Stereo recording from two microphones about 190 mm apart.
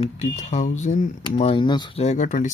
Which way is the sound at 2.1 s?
40° left (ahead or behind).